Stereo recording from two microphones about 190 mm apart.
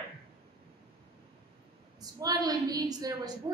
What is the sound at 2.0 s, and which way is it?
A woman's voice, 20° right (ahead or behind).